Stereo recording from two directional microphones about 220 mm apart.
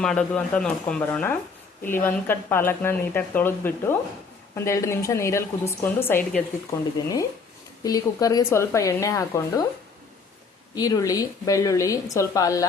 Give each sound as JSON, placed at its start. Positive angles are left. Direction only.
{"t": 0.0, "sound": "speech", "side_deg": 5}
{"t": 7.9, "sound": "speech", "side_deg": 15}
{"t": 10.8, "sound": "speech", "side_deg": 15}